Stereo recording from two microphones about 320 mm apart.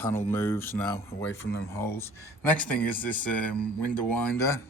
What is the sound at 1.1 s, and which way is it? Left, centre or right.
Speech, left.